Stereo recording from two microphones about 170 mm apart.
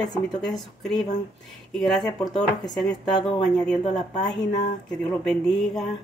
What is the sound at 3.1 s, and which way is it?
Speech, 30° left (ahead or behind).